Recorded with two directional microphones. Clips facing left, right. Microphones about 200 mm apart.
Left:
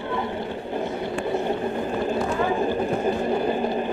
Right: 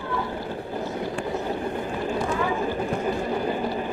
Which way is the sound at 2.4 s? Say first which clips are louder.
Left 3 dB; 35° left (ahead or behind).